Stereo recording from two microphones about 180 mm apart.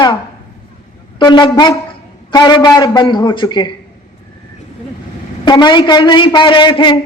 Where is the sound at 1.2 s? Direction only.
25° left (ahead or behind).